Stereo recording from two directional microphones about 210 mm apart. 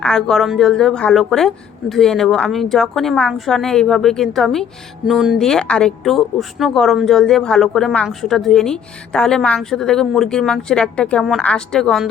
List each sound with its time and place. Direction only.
0.0 s speech: 5° left (ahead or behind)